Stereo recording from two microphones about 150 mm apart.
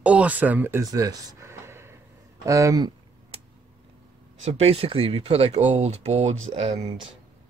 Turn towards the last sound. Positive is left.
turn(degrees=-40)  # may be behind; listen again after turning